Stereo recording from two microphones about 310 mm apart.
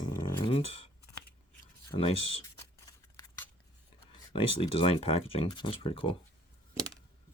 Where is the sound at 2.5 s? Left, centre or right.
Centre.